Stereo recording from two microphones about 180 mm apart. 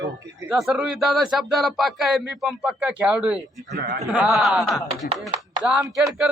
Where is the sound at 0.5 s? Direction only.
5° right (ahead or behind).